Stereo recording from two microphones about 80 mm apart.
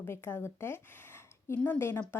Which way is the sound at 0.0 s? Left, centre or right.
Left.